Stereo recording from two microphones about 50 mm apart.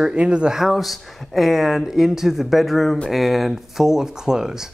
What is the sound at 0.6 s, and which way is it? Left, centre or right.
Speech, centre.